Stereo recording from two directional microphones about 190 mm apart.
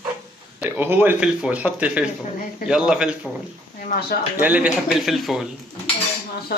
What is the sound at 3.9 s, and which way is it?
Speech, 45° left (ahead or behind).